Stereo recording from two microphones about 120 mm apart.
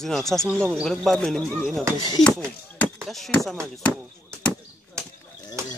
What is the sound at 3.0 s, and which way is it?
Speech, centre (ahead or behind).